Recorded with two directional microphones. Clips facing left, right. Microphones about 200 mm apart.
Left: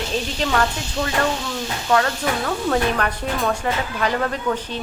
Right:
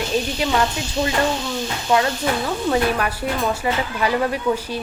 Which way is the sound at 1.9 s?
10° right (ahead or behind).